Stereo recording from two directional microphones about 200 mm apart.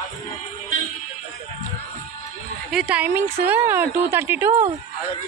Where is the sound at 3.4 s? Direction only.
10° right (ahead or behind).